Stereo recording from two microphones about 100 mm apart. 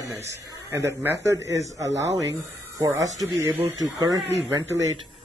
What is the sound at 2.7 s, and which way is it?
Speech, 35° right (ahead or behind).